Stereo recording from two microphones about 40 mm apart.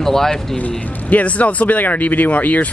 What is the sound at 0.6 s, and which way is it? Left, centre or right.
Speech, left.